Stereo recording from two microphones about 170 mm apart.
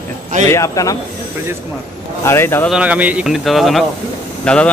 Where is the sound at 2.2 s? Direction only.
15° left (ahead or behind).